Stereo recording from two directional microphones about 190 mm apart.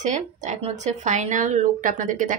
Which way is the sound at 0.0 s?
40° right (ahead or behind).